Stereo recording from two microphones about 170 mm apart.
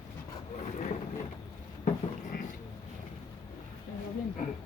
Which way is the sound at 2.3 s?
65° left (ahead or behind).